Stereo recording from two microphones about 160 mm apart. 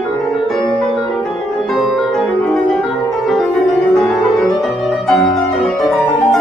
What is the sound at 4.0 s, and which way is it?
Music, centre (ahead or behind).